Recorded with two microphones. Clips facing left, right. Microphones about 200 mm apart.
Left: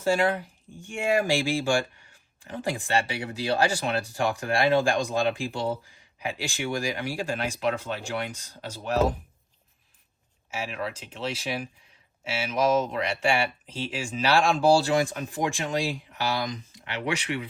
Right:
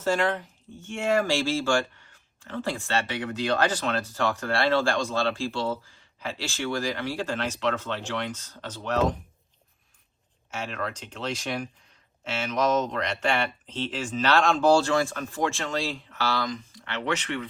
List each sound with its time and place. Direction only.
0.0 s speech: 10° left (ahead or behind)
10.5 s speech: 5° left (ahead or behind)